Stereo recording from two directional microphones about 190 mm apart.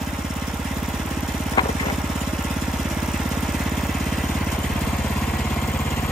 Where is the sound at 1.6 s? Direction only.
20° left (ahead or behind).